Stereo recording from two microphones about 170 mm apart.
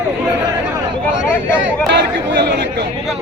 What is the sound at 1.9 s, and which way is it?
Speech, 85° right.